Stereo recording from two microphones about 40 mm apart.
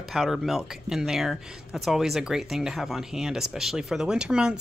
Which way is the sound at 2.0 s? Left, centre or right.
Centre.